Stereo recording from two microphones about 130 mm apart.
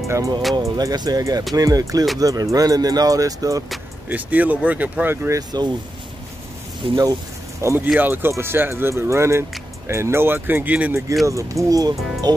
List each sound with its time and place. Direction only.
0.6 s speech: 30° right (ahead or behind)
4.1 s speech: 10° right (ahead or behind)
6.8 s speech: 40° right (ahead or behind)
7.6 s speech: 15° right (ahead or behind)